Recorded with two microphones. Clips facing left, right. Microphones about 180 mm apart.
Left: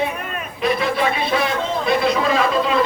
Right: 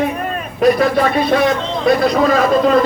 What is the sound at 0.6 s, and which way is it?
A man's voice, 45° right (ahead or behind).